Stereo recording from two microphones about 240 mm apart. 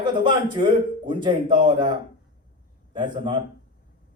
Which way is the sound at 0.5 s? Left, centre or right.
Centre.